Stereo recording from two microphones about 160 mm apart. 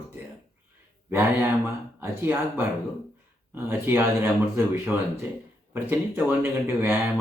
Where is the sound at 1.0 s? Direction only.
15° right (ahead or behind).